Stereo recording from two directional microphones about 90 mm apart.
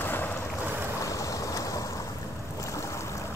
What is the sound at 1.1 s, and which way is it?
Vehicle, 40° left (ahead or behind).